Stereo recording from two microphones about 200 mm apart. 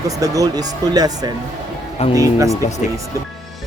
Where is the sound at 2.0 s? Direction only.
30° left (ahead or behind).